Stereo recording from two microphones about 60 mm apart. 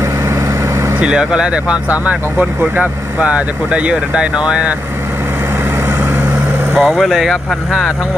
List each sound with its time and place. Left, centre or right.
1.0 s speech: centre
6.7 s speech: centre